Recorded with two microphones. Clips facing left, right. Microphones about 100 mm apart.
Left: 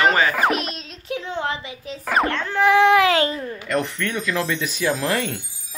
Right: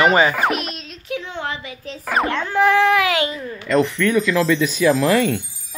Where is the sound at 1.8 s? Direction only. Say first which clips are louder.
Even; centre (ahead or behind).